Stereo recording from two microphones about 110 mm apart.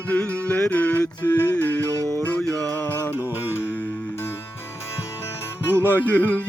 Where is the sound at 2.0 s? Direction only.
30° right (ahead or behind).